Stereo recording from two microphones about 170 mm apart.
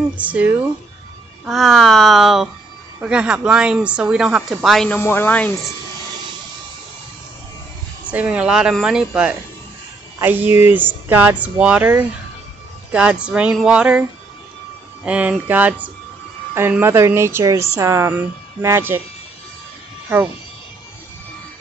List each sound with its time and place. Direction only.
0.2 s speech: 10° right (ahead or behind)
1.4 s speech: centre (ahead or behind)
8.1 s speech: 10° right (ahead or behind)
15.0 s speech: 10° right (ahead or behind)